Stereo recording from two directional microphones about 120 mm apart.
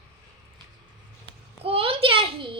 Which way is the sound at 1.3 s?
50° right (ahead or behind).